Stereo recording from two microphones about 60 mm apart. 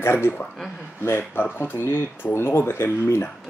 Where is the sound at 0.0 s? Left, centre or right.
Left.